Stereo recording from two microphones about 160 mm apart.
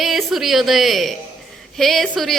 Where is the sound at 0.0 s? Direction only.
Centre (ahead or behind).